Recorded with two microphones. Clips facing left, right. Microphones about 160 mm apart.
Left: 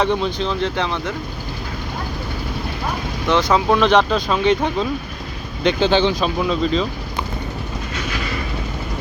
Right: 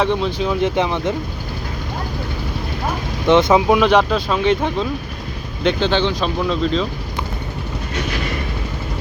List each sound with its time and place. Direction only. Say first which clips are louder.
0.0 s speech: right 1 dB; centre (ahead or behind); by 1.1 s 15° right (ahead or behind)
3.2 s speech: right 4 dB; 20° right (ahead or behind)
3.8 s speech: right 1 dB; 5° right (ahead or behind)